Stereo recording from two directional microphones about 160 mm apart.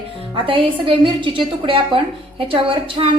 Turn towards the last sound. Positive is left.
turn(degrees=-35)  # may be behind; listen again after turning